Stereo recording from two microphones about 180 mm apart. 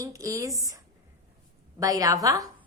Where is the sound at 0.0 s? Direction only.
20° right (ahead or behind).